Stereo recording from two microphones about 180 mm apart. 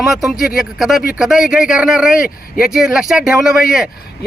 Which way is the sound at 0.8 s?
Centre (ahead or behind).